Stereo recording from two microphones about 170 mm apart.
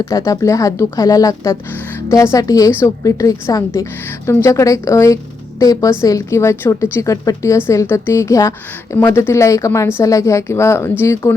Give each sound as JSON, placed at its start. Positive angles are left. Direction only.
{"t": 0.0, "sound": "a woman's voice", "side_deg": 15}